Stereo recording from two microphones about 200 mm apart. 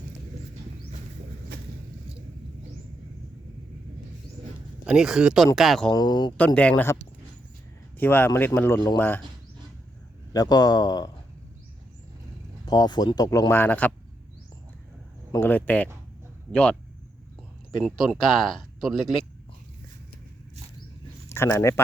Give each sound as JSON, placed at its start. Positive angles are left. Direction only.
{"t": 4.9, "sound": "speech", "side_deg": -5}
{"t": 5.9, "sound": "speech", "side_deg": 20}
{"t": 6.3, "sound": "a man's voice", "side_deg": 5}
{"t": 10.3, "sound": "speech", "side_deg": 20}
{"t": 12.6, "sound": "speech", "side_deg": 20}
{"t": 15.3, "sound": "a man's voice", "side_deg": 10}
{"t": 17.8, "sound": "speech", "side_deg": 0}
{"t": 21.2, "sound": "speech", "side_deg": 10}